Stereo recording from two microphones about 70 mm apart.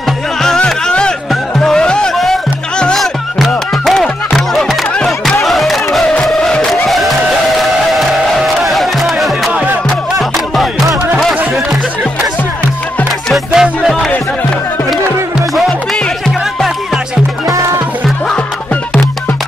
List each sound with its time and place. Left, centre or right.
0.4 s music: centre
8.5 s music: centre
13.3 s music: centre
17.5 s music: right